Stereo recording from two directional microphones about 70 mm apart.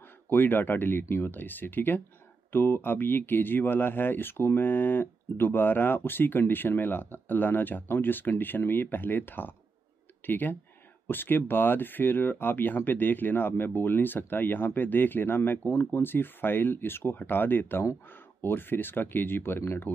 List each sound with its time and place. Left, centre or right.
0.3 s speech: left